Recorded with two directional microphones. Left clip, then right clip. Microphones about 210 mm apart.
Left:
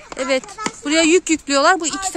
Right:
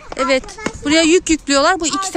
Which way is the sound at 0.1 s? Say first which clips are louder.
Right 4 dB; 5° left (ahead or behind).